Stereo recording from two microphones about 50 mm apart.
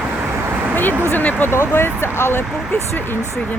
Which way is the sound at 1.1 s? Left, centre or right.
Left.